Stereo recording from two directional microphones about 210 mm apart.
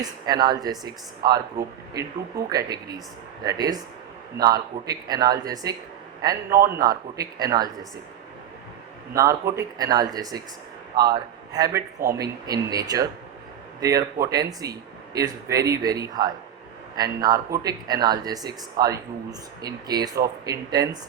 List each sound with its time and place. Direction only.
0.0 s speech: 20° right (ahead or behind)
9.1 s a man's voice: 15° right (ahead or behind)
14.3 s speech: 15° right (ahead or behind)